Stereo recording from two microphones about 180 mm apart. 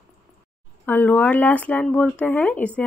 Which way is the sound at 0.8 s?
10° left (ahead or behind).